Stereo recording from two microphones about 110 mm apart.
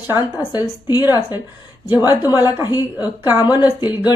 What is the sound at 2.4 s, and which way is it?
Speech, 35° left (ahead or behind).